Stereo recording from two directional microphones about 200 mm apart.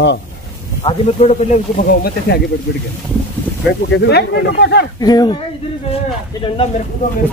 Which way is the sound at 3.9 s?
55° left (ahead or behind).